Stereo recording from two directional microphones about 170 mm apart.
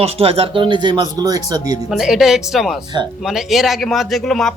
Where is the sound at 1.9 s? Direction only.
Centre (ahead or behind).